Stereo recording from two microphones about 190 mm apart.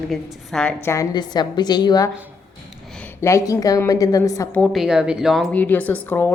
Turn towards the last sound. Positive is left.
turn(degrees=10)  # may be behind; listen again after turning